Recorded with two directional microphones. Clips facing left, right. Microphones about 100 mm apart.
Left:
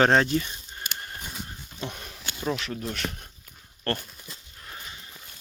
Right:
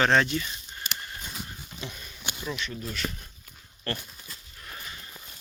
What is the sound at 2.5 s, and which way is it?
Speech, 90° left.